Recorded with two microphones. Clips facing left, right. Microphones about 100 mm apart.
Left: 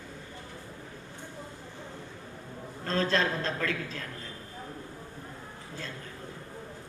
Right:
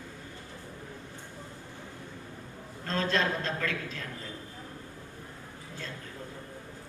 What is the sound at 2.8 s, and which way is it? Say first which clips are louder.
A woman's voice: left 1 dB; 35° left (ahead or behind).